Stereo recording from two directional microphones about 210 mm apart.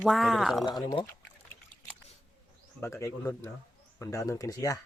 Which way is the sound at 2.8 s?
15° left (ahead or behind).